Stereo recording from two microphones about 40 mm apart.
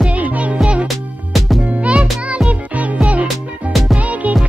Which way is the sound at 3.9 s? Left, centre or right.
Right.